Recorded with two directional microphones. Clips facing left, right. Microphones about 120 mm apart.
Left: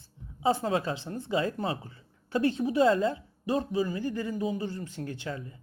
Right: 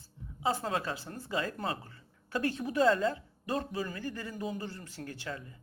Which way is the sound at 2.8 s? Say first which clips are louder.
Left 2 dB; 35° left (ahead or behind).